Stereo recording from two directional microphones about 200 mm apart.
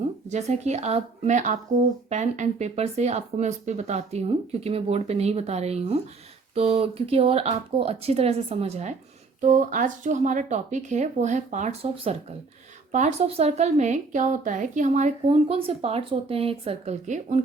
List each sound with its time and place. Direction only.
0.3 s a woman's voice: 35° right (ahead or behind)